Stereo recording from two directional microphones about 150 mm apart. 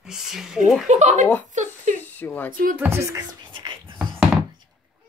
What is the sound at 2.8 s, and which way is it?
Speech, 20° right (ahead or behind).